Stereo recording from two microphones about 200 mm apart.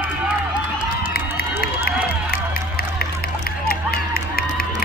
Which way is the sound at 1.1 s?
50° left (ahead or behind).